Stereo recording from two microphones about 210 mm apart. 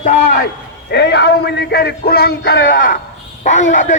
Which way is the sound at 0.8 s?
55° left (ahead or behind).